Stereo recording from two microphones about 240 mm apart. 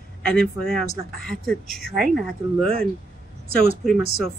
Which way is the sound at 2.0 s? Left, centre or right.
Right.